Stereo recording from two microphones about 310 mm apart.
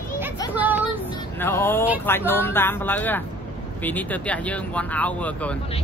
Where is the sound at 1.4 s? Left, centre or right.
Centre.